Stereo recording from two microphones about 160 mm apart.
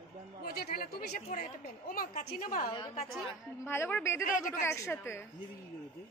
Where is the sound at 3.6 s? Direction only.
15° left (ahead or behind).